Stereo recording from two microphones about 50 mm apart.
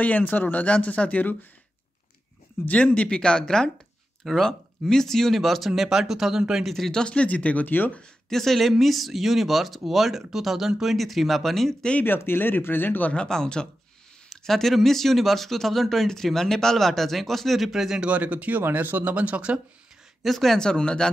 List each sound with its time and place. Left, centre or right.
0.0 s speech: left
2.6 s speech: left
4.2 s speech: centre
6.6 s speech: centre
7.0 s speech: left
8.3 s speech: centre
12.2 s speech: left
13.1 s speech: centre
18.0 s speech: right
18.6 s speech: right
20.2 s speech: centre